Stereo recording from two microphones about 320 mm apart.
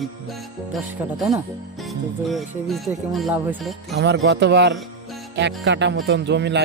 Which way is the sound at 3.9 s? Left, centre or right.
Right.